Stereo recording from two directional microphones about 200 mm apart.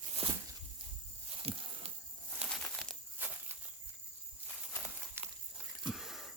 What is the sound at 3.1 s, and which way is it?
Walk, 10° right (ahead or behind).